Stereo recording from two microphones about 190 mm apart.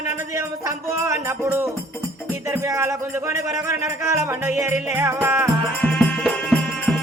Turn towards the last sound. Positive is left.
turn(degrees=0)  # may be behind; listen again after turning